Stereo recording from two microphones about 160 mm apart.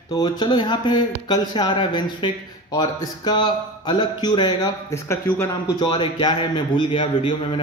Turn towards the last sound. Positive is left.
turn(degrees=35)  # may be behind; listen again after turning